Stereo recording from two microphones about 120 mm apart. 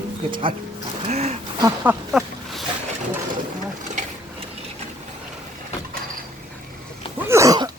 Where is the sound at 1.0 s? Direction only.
65° right (ahead or behind).